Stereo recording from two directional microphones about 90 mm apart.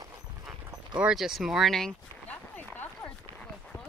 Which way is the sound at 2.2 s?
20° left (ahead or behind).